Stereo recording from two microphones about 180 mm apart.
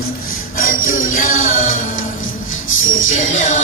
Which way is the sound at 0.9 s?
90° left.